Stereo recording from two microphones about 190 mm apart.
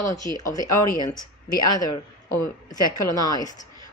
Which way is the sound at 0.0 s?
15° left (ahead or behind).